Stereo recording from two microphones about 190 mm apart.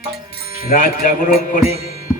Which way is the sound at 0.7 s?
45° left (ahead or behind).